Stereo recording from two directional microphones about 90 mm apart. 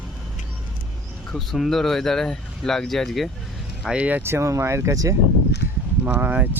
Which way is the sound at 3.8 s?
15° right (ahead or behind).